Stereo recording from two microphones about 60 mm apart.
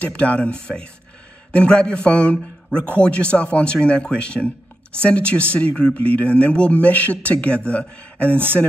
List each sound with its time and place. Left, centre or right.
0.0 s speech: left